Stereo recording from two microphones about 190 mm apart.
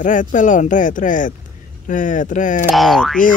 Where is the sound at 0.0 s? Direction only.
40° left (ahead or behind).